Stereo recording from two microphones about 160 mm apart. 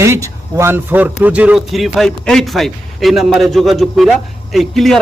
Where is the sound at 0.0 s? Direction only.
20° right (ahead or behind).